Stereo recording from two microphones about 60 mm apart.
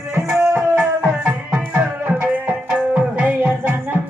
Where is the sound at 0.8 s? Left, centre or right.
Centre; by 2.3 s right.